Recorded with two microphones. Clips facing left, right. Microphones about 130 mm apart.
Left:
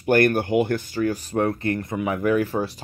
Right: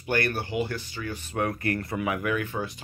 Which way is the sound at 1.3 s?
30° left (ahead or behind).